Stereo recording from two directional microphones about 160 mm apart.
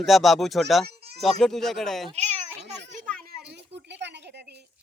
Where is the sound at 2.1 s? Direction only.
45° right (ahead or behind).